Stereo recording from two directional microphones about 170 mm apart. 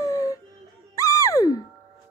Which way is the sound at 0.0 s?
20° left (ahead or behind).